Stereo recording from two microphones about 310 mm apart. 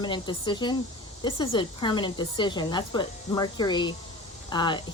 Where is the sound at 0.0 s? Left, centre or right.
Centre.